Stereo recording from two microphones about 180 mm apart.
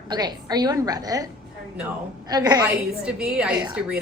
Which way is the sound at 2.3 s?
20° right (ahead or behind).